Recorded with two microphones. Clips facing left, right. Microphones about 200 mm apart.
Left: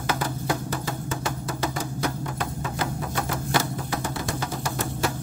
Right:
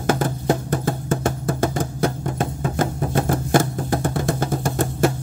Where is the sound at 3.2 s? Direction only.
50° right (ahead or behind).